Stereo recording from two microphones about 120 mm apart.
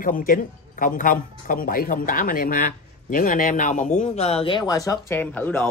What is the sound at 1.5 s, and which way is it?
Speech, 90° left.